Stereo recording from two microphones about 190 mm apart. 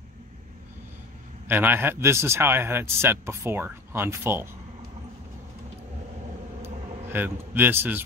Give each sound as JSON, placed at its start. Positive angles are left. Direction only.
{"t": 1.5, "sound": "a man's voice", "side_deg": -10}
{"t": 6.6, "sound": "vehicle", "side_deg": -10}